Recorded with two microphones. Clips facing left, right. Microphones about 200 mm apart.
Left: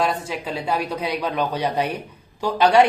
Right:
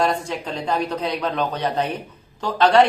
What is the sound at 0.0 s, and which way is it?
Speech, 5° left (ahead or behind).